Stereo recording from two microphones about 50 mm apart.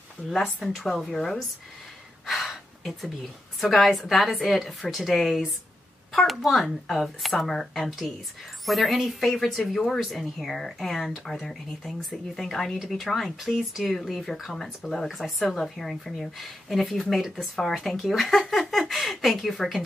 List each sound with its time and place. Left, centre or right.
0.4 s speech: centre
1.1 s speech: centre
2.2 s gasp: centre
3.6 s speech: centre